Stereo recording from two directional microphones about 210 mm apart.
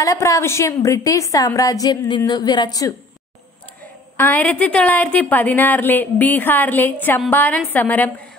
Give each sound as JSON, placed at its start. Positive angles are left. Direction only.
{"t": 0.0, "sound": "a woman's voice", "side_deg": 15}
{"t": 4.2, "sound": "a woman's voice", "side_deg": 10}